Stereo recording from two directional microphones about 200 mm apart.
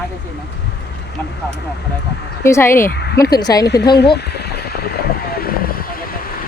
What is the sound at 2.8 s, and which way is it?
Speech, 55° left (ahead or behind).